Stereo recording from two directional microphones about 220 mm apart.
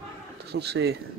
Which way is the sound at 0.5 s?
50° right (ahead or behind).